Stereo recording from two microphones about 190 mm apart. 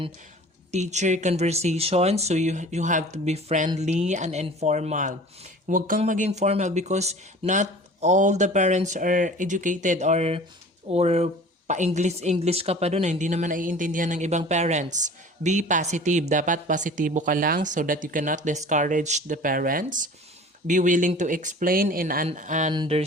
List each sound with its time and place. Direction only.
0.7 s speech: 35° right (ahead or behind)
22.7 s speech: 30° right (ahead or behind)